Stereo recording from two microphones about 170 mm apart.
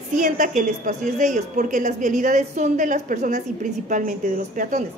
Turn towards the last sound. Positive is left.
turn(degrees=-50)  # may be behind; listen again after turning